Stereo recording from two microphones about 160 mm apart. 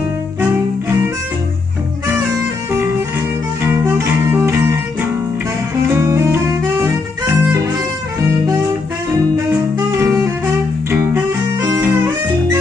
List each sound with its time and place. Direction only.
3.6 s music: 15° right (ahead or behind)
5.9 s music: 20° right (ahead or behind)
9.8 s music: 15° right (ahead or behind)